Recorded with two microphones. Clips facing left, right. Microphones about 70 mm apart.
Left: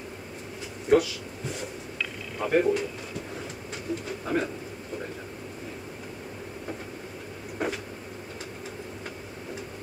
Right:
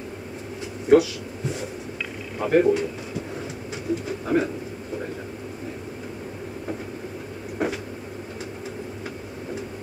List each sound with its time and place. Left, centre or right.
0.8 s speech: centre
2.3 s pigeon: centre
3.9 s speech: centre
7.5 s cupboard open or close: centre